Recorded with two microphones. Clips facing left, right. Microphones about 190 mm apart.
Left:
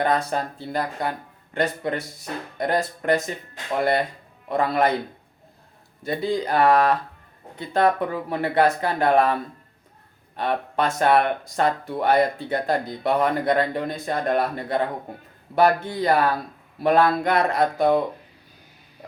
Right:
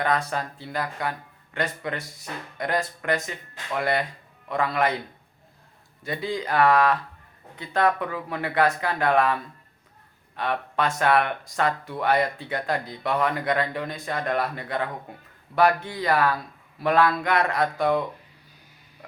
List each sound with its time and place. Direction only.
0.0 s speech: 25° left (ahead or behind)
6.1 s speech: 35° left (ahead or behind)
11.9 s speech: 25° left (ahead or behind)
16.0 s speech: 25° left (ahead or behind)
17.8 s speech: 35° left (ahead or behind)